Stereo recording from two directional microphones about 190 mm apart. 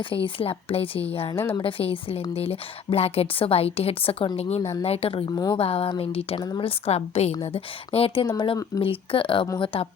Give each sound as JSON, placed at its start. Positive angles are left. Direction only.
{"t": 0.3, "sound": "a woman's voice", "side_deg": 30}
{"t": 1.4, "sound": "a woman's voice", "side_deg": 15}
{"t": 1.6, "sound": "a woman's voice", "side_deg": 30}
{"t": 5.5, "sound": "a woman's voice", "side_deg": 30}